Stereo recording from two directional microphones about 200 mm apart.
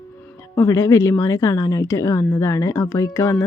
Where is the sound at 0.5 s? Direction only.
15° left (ahead or behind).